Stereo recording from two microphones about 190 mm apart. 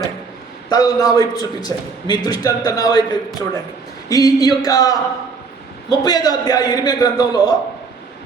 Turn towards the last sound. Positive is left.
turn(degrees=20)  # may be behind; listen again after turning